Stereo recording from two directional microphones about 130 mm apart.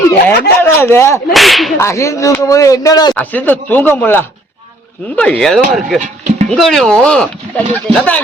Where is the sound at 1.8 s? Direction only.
20° left (ahead or behind).